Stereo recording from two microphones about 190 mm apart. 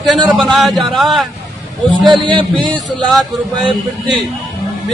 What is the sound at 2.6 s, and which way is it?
A man's voice, centre (ahead or behind).